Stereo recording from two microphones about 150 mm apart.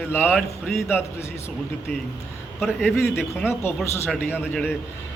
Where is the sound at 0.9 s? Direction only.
15° left (ahead or behind).